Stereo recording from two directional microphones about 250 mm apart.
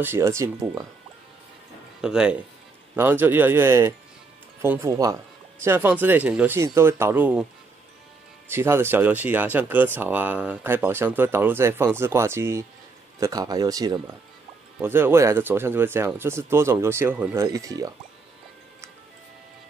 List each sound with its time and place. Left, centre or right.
0.0 s speech: centre
2.0 s speech: centre
8.5 s speech: centre